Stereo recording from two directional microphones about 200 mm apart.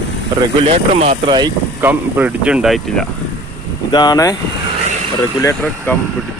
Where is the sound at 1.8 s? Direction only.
5° right (ahead or behind).